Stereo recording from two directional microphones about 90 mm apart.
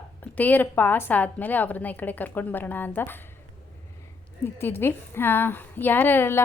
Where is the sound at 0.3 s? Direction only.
20° left (ahead or behind).